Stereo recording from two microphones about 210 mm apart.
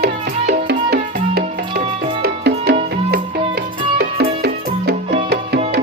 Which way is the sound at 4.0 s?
50° right (ahead or behind).